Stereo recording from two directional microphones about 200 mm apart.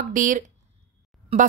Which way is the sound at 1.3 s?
30° right (ahead or behind).